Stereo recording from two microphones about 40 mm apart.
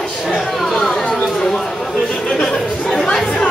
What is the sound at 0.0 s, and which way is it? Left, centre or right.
Chatter, centre.